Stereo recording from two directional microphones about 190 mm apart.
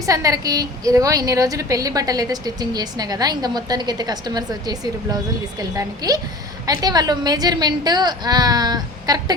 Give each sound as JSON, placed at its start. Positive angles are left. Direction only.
{"t": 0.0, "sound": "a woman's voice", "side_deg": -20}